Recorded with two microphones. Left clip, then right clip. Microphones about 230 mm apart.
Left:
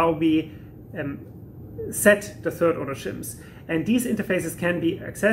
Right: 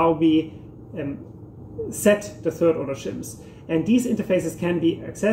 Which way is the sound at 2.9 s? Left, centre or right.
Centre.